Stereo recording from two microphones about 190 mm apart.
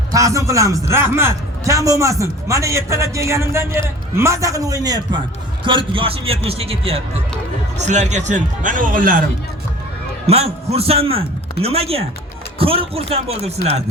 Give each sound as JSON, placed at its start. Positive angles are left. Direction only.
{"t": 0.1, "sound": "a man's voice", "side_deg": -15}
{"t": 10.2, "sound": "a man's voice", "side_deg": -35}